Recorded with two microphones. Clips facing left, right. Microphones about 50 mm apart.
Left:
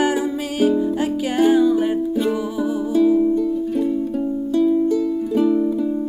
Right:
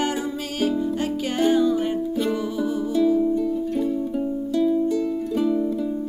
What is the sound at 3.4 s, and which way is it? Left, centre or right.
Music, centre.